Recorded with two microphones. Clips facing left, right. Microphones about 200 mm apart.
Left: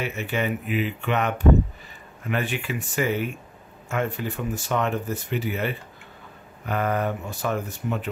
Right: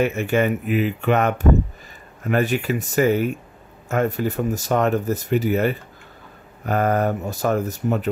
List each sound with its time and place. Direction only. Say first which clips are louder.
0.0 s speech: right 8 dB; 45° right (ahead or behind)